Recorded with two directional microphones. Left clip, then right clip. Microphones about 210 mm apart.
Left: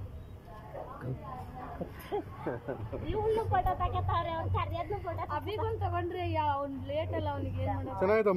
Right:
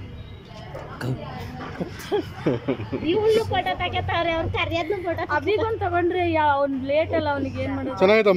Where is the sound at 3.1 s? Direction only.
10° right (ahead or behind).